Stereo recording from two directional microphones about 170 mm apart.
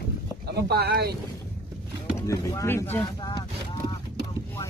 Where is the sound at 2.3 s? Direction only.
20° left (ahead or behind).